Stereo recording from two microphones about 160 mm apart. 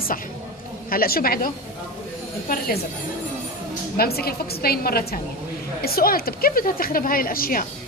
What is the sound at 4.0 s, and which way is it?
A woman's voice, 75° left (ahead or behind).